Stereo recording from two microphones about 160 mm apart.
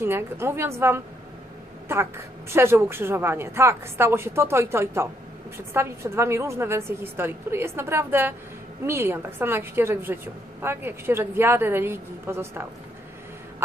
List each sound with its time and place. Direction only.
0.0 s a woman's voice: 15° right (ahead or behind)